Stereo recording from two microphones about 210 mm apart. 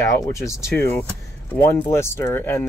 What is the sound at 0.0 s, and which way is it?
Speech, 15° left (ahead or behind).